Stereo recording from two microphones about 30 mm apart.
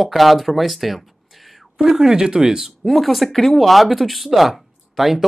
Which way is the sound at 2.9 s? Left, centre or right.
Centre.